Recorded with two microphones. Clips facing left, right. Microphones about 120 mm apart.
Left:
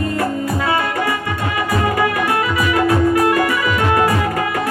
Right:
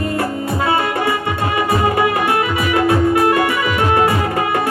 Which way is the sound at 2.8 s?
25° right (ahead or behind).